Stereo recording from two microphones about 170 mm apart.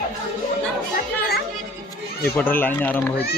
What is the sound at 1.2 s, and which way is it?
Music, 65° left (ahead or behind).